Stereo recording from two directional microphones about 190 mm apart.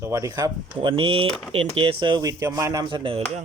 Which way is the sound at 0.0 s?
15° right (ahead or behind).